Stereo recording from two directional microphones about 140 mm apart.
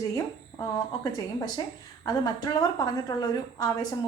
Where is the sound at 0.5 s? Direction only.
35° left (ahead or behind).